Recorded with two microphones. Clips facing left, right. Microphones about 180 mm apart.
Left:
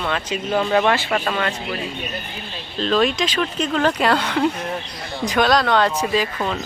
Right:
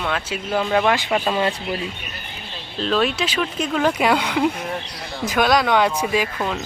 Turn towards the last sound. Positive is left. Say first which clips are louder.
# left 1 dB
turn(degrees=-10)  # may be behind; listen again after turning